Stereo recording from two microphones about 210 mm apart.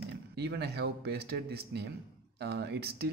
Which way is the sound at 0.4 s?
50° right (ahead or behind).